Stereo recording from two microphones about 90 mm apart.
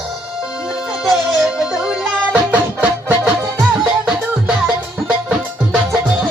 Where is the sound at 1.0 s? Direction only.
Centre (ahead or behind).